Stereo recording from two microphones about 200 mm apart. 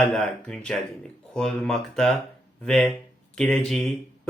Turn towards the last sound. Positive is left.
turn(degrees=5)  # may be behind; listen again after turning